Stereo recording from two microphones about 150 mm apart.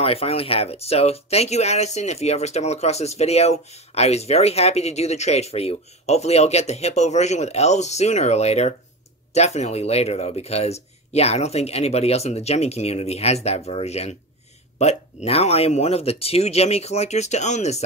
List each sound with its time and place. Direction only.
0.0 s speech: 40° left (ahead or behind)